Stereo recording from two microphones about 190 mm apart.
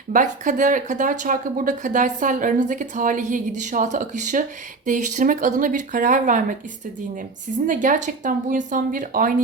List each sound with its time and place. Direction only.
0.1 s speech: 45° right (ahead or behind)
7.7 s speech: 45° right (ahead or behind)